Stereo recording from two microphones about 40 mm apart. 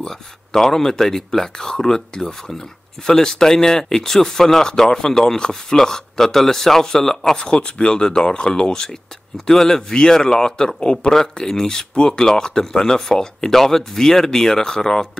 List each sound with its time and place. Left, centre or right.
0.0 s speech: centre
11.1 s speech: centre